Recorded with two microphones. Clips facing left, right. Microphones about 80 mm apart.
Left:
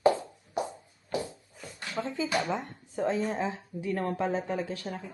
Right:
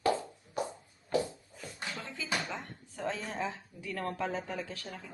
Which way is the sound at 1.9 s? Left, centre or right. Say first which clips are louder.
Left 10 dB; left.